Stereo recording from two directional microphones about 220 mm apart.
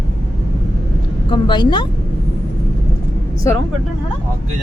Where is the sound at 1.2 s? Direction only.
20° left (ahead or behind).